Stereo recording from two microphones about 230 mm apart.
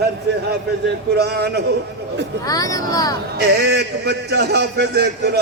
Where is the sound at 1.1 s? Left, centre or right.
Right.